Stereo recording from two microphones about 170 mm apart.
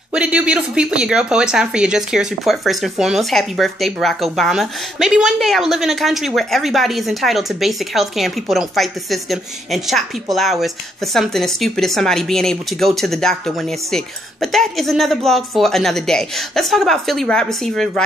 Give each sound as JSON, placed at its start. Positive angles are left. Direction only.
{"t": 0.1, "sound": "speech", "side_deg": -5}